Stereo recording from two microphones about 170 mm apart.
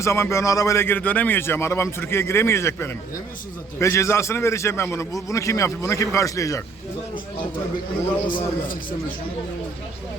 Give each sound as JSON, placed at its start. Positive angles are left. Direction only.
{"t": 0.0, "sound": "a man's voice", "side_deg": 15}
{"t": 8.3, "sound": "speech", "side_deg": 55}